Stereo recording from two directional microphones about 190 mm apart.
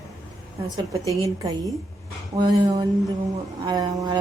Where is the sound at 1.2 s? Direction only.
20° right (ahead or behind).